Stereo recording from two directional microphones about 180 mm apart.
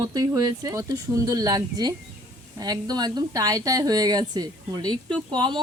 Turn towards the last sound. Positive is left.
turn(degrees=-25)  # may be behind; listen again after turning